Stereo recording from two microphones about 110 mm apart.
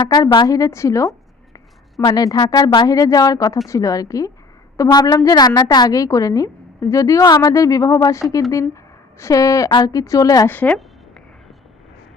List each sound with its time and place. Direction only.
0.4 s a woman's voice: 30° left (ahead or behind)
10.5 s a woman's voice: 15° left (ahead or behind)